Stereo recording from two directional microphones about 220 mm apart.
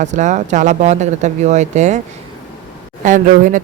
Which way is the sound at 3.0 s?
35° right (ahead or behind).